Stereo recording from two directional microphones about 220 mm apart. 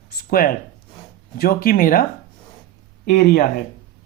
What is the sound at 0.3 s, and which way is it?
A woman's voice, 40° left (ahead or behind).